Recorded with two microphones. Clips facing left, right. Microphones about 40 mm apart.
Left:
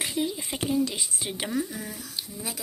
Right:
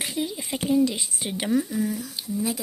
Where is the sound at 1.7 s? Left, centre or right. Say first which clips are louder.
Right 10 dB; left.